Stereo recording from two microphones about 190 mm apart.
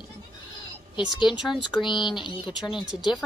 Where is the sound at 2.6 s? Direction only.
5° right (ahead or behind).